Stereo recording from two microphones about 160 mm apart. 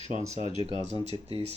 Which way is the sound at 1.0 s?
40° right (ahead or behind).